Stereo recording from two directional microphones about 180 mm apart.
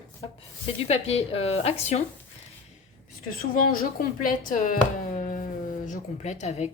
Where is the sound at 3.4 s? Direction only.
55° left (ahead or behind).